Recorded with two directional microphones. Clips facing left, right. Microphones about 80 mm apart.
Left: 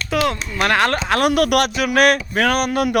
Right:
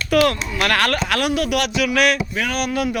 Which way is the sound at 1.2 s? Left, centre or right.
Left.